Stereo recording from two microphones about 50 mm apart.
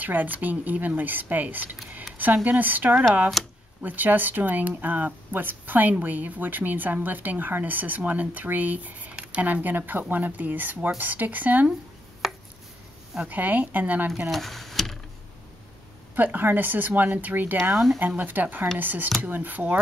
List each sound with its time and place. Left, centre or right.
0.0 s speech: right
3.4 s speech: centre
3.8 s speech: right
13.2 s speech: right
14.3 s a sound: centre
16.2 s speech: right